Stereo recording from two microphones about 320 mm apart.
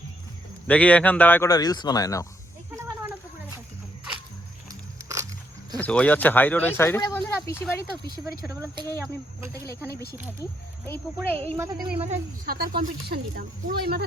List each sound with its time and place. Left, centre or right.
0.7 s speech: centre
4.7 s biting: centre
5.7 s speech: centre
9.9 s speech: left
10.4 s speech: centre
11.5 s a woman's voice: centre
12.5 s speech: right